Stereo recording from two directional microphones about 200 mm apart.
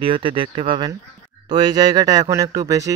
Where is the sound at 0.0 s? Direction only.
25° right (ahead or behind).